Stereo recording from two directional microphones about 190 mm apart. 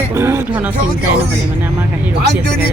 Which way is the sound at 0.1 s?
15° right (ahead or behind).